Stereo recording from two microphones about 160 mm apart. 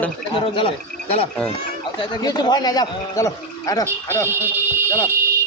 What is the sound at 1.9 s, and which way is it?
Speech, 30° left (ahead or behind).